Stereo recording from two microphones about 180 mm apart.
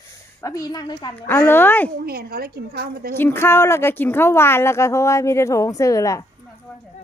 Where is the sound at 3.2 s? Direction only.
15° left (ahead or behind).